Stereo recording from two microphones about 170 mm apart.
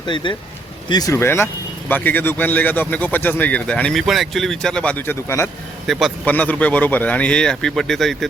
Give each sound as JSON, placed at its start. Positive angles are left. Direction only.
{"t": 0.0, "sound": "speech", "side_deg": 30}
{"t": 5.9, "sound": "a man's voice", "side_deg": 0}